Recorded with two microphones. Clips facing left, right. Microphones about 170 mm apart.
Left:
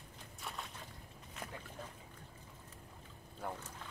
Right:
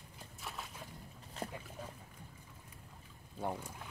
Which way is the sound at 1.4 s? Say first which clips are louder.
Right 6 dB; 30° right (ahead or behind).